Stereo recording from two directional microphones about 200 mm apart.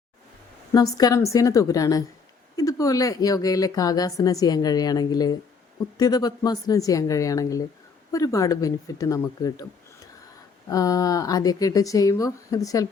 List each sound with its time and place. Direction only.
0.7 s a woman's voice: 20° left (ahead or behind)
10.7 s speech: 15° left (ahead or behind)